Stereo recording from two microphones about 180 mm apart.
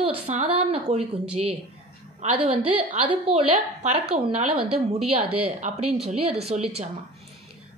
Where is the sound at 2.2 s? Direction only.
35° right (ahead or behind).